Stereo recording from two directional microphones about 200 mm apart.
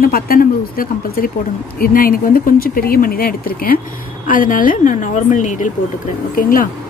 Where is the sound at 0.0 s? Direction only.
45° left (ahead or behind).